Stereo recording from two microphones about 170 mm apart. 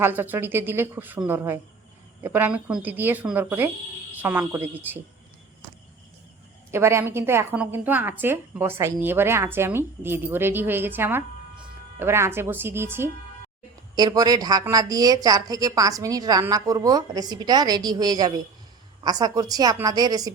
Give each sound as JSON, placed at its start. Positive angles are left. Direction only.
{"t": 0.0, "sound": "a woman's voice", "side_deg": -10}
{"t": 6.7, "sound": "a woman's voice", "side_deg": -15}